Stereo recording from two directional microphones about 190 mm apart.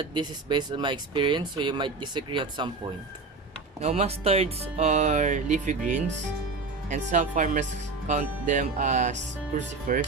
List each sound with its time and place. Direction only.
0.0 s speech: 25° right (ahead or behind); by 10.0 s 45° right (ahead or behind)